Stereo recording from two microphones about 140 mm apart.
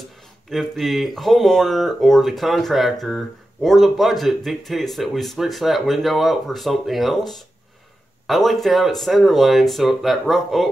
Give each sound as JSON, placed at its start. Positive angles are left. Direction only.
{"t": 0.5, "sound": "speech", "side_deg": 0}